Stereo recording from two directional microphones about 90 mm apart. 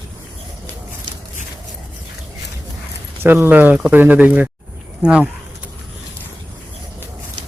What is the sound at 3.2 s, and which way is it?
Speech, 25° right (ahead or behind).